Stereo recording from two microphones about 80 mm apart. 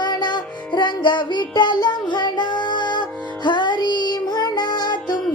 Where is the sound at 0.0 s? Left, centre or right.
Left.